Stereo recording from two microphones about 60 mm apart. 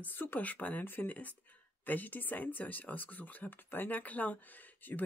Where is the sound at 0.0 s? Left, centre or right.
Left.